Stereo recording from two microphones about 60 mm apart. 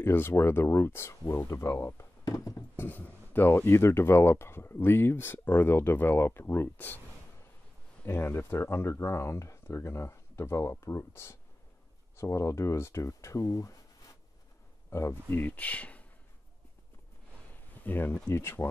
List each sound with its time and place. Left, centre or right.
0.0 s speech: left
1.8 s speech: left
2.2 s a sound: left
2.7 s speech: left
8.0 s speech: left
14.9 s speech: left
15.2 s speech: left
17.8 s speech: left
18.3 s speech: left